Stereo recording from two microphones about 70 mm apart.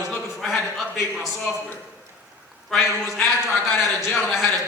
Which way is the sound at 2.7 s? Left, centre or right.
Centre.